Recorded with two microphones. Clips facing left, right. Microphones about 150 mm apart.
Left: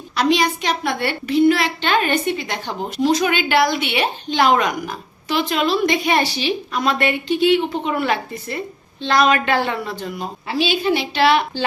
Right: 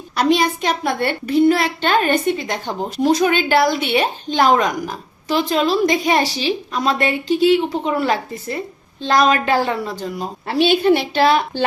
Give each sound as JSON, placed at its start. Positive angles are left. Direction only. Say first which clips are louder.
{"t": 0.2, "sound": "a child's voice", "louder": "right 1 dB", "side_deg": -50}
{"t": 10.5, "sound": "a woman's voice", "louder": "right 5 dB", "side_deg": -55}